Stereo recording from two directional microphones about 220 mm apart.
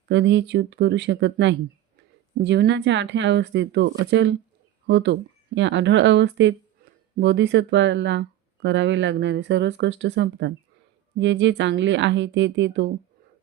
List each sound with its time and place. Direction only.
0.1 s speech: 55° right (ahead or behind)